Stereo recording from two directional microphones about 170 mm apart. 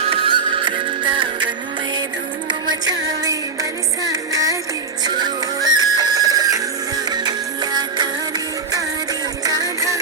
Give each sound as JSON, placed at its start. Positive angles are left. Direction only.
{"t": 0.1, "sound": "music", "side_deg": -30}
{"t": 2.5, "sound": "music", "side_deg": -25}
{"t": 9.4, "sound": "music", "side_deg": -20}